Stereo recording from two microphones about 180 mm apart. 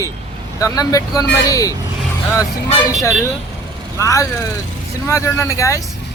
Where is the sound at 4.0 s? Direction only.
15° left (ahead or behind).